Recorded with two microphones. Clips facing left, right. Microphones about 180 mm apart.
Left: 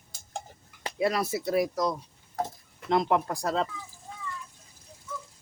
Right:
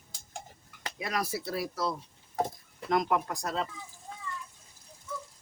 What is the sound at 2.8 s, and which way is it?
Speech, 25° left (ahead or behind).